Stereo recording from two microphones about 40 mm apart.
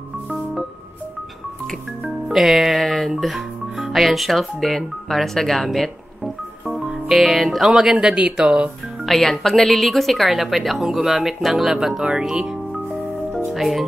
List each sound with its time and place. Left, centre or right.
2.2 s speech: centre
2.8 s music: centre
3.2 s speech: centre
6.7 s music: centre
7.2 s speech: centre
8.2 s speech: right
9.0 s speech: centre
13.5 s speech: centre